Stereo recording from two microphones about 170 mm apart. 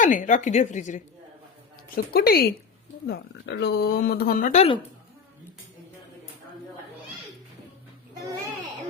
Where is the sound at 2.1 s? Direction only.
65° left (ahead or behind).